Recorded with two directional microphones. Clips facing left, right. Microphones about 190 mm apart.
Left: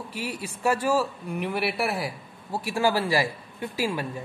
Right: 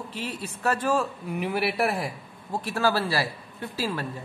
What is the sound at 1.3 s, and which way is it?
A man's voice, 5° right (ahead or behind).